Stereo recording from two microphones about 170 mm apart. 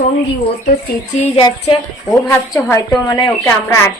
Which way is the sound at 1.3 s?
30° left (ahead or behind).